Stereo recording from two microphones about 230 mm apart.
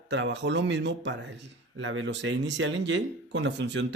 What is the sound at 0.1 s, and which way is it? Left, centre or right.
Speech, right.